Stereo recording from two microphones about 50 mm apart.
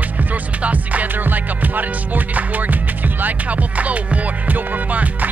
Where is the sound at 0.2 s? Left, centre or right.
Right.